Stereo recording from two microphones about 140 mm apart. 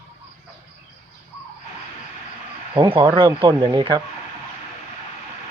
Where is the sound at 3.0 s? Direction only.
30° right (ahead or behind).